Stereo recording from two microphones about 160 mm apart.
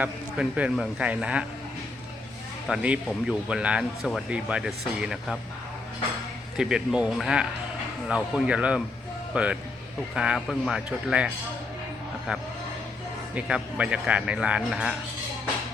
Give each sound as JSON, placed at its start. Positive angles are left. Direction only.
{"t": 0.0, "sound": "speech", "side_deg": -10}
{"t": 2.6, "sound": "speech", "side_deg": -5}
{"t": 6.6, "sound": "speech", "side_deg": -5}
{"t": 13.3, "sound": "speech", "side_deg": -10}